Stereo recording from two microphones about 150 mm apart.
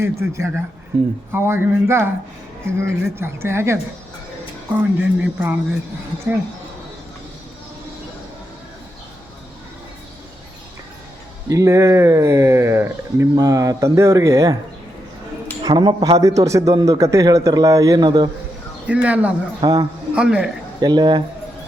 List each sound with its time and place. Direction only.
0.0 s speech: 20° right (ahead or behind)
4.8 s speech: 10° right (ahead or behind)
11.4 s speech: 20° right (ahead or behind)
15.6 s speech: 30° right (ahead or behind)
18.9 s speech: 10° right (ahead or behind)
19.6 s speech: 25° right (ahead or behind)
20.1 s a man's voice: 5° right (ahead or behind)
20.8 s speech: 30° right (ahead or behind)